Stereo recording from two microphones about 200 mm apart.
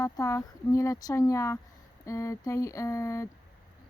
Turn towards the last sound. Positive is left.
turn(degrees=15)  # may be behind; listen again after turning